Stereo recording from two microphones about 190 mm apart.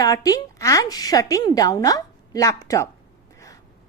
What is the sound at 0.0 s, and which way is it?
A woman's voice, 20° left (ahead or behind).